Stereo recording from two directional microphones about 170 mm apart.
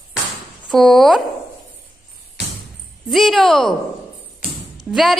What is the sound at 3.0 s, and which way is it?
Speech, centre (ahead or behind).